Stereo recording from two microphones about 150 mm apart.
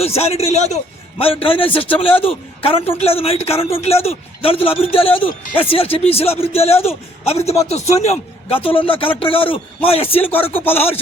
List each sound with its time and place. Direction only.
0.0 s a man's voice: 45° left (ahead or behind)
10.3 s chopping: 15° left (ahead or behind)